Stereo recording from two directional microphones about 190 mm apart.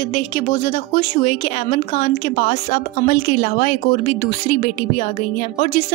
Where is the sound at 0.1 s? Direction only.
40° left (ahead or behind).